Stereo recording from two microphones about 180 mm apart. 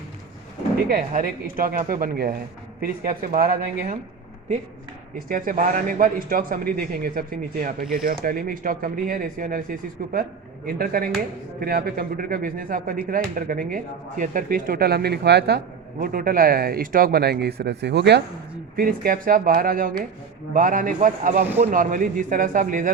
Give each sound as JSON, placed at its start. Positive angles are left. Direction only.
{"t": 0.8, "sound": "speech", "side_deg": -55}
{"t": 5.3, "sound": "speech", "side_deg": -50}
{"t": 18.8, "sound": "speech", "side_deg": -55}